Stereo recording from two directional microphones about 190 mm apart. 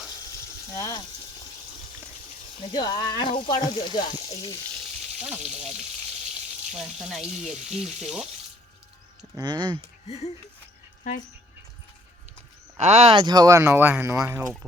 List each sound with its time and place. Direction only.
0.7 s speech: 20° left (ahead or behind)
2.7 s speech: 20° left (ahead or behind)
6.7 s speech: centre (ahead or behind)
9.3 s speech: 20° right (ahead or behind)
10.1 s speech: 30° left (ahead or behind)
11.1 s speech: 45° left (ahead or behind)
12.7 s speech: 35° right (ahead or behind); by 14.4 s 10° right (ahead or behind)